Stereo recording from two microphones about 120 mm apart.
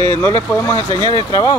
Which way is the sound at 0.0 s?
20° left (ahead or behind).